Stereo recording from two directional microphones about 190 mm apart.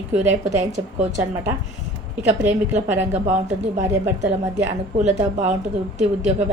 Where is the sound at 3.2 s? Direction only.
40° right (ahead or behind).